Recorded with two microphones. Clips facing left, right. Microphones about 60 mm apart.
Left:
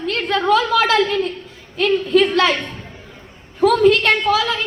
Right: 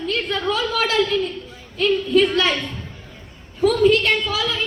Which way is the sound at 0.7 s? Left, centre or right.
Left.